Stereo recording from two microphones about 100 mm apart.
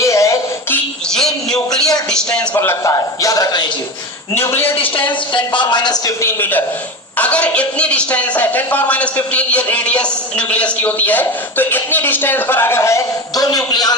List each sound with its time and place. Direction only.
0.0 s a sound: 30° left (ahead or behind)
1.1 s a sound: 5° left (ahead or behind)
2.0 s a man's voice: 10° left (ahead or behind)
2.6 s a man's voice: 30° left (ahead or behind)
4.4 s a man's voice: 25° left (ahead or behind)
4.8 s speech: 55° left (ahead or behind)
6.1 s a man's voice: 25° left (ahead or behind)
13.4 s a man's voice: 40° left (ahead or behind)